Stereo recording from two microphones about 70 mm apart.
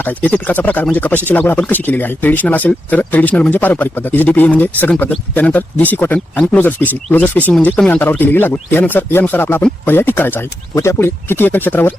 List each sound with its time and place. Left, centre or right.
0.0 s speech: left